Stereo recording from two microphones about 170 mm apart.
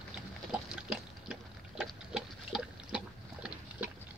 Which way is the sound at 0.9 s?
5° right (ahead or behind).